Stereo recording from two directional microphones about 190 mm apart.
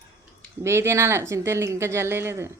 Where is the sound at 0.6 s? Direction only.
15° right (ahead or behind).